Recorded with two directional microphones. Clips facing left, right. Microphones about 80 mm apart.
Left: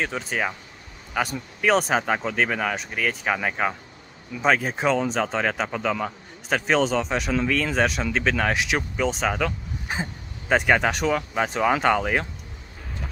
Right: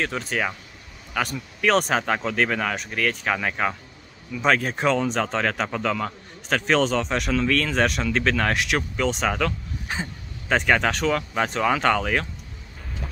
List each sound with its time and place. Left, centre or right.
0.0 s speech: centre
1.6 s speech: centre
9.4 s a sound: centre
10.5 s speech: centre